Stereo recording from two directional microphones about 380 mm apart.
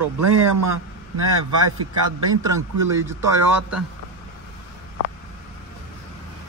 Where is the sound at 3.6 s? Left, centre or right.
Right.